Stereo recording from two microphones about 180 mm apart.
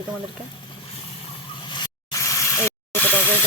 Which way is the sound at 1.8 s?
20° left (ahead or behind).